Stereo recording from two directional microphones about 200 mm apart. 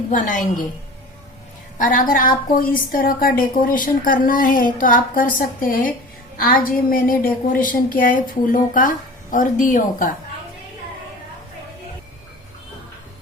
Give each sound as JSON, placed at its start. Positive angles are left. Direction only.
{"t": 0.1, "sound": "a woman's voice", "side_deg": 40}
{"t": 1.8, "sound": "a woman's voice", "side_deg": 40}